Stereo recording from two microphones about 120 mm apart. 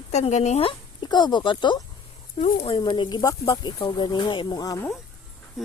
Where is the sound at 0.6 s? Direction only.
40° left (ahead or behind).